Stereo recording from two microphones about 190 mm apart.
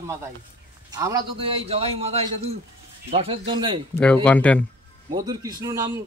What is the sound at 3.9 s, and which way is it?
Speech, 5° left (ahead or behind).